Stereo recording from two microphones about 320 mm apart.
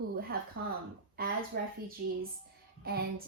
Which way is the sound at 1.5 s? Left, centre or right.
Right.